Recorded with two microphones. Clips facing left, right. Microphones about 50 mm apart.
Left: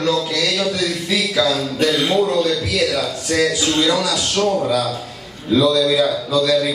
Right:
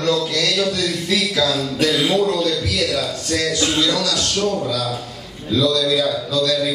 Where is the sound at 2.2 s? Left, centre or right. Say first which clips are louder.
Left 1 dB; centre.